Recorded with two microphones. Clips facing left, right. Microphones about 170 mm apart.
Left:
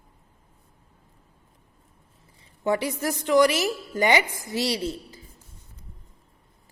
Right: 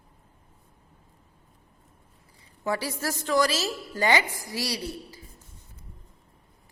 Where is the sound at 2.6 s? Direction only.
20° left (ahead or behind).